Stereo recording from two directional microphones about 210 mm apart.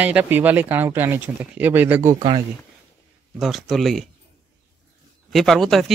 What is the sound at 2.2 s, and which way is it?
Speech, 20° right (ahead or behind).